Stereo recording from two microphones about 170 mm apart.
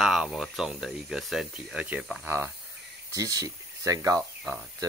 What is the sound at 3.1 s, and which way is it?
Speech, 20° right (ahead or behind).